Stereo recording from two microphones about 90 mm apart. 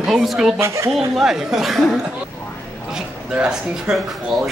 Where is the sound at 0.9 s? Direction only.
5° right (ahead or behind).